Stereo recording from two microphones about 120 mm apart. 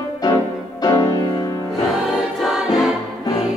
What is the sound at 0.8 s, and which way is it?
Music, 35° left (ahead or behind).